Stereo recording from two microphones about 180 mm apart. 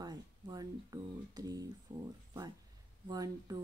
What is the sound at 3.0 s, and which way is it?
Speech, 20° right (ahead or behind).